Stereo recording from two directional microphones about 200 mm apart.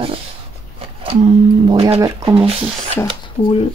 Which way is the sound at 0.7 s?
25° right (ahead or behind).